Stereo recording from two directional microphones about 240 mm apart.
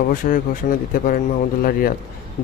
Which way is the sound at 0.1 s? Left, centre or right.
Left.